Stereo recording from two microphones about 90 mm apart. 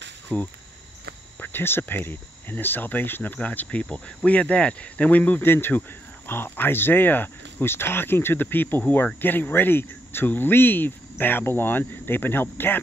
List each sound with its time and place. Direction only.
0.3 s speech: 10° left (ahead or behind)
1.4 s cricket: 25° left (ahead or behind)